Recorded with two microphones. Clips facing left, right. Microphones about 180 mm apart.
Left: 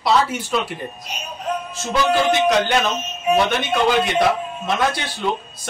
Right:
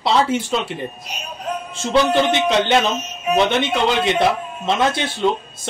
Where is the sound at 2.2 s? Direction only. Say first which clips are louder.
Even; 25° right (ahead or behind).